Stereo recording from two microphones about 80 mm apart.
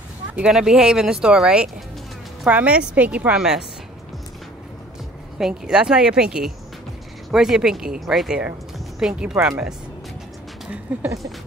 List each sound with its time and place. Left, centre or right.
0.3 s speech: centre
3.3 s speech: centre
5.4 s speech: centre
10.9 s speech: centre